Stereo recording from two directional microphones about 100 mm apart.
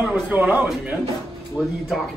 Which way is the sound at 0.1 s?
15° right (ahead or behind).